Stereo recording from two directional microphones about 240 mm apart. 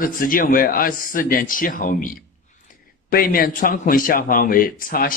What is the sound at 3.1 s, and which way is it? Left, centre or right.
A man's voice, left.